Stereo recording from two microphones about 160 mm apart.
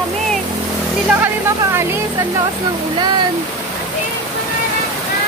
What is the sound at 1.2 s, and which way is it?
Music, 15° right (ahead or behind).